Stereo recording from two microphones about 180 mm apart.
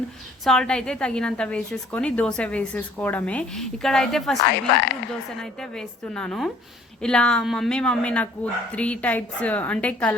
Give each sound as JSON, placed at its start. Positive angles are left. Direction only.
{"t": 0.4, "sound": "a woman's voice", "side_deg": 5}
{"t": 4.4, "sound": "speech", "side_deg": 65}
{"t": 5.4, "sound": "a woman's voice", "side_deg": 5}